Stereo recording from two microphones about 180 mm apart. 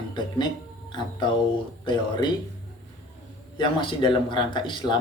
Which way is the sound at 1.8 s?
25° left (ahead or behind).